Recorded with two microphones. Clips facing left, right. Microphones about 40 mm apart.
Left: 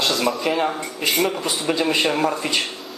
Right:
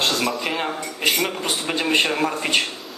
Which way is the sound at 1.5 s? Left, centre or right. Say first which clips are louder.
Left 2 dB; right.